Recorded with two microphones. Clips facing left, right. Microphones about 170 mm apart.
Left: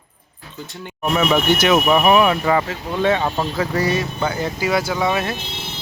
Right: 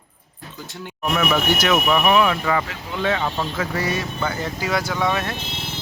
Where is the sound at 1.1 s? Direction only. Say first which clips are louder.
Left 4 dB; 20° left (ahead or behind).